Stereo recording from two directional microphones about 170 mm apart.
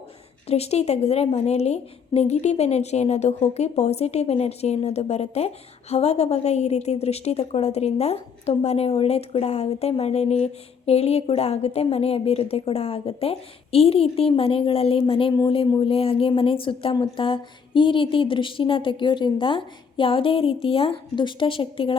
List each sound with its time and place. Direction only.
0.4 s a woman's voice: 35° left (ahead or behind)